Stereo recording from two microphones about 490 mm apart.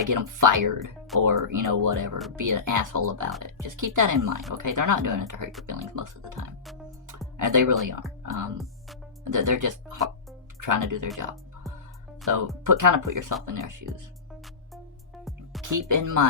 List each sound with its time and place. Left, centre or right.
0.0 s speech: right
4.3 s speech: centre
4.5 s speech: right
7.3 s speech: right
8.3 s speech: centre
9.2 s speech: right
12.6 s speech: right
15.2 s music: centre
15.7 s speech: right